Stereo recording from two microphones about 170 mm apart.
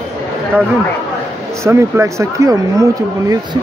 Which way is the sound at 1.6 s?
15° right (ahead or behind).